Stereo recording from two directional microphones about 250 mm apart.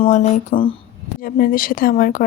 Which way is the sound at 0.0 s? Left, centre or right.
Left.